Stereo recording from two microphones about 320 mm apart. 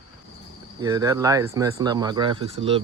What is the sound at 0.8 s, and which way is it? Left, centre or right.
Speech, centre.